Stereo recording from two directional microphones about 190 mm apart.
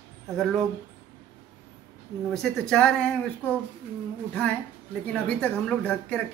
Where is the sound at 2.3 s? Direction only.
5° left (ahead or behind).